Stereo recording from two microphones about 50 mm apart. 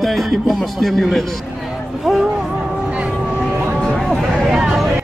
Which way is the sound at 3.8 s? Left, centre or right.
Centre.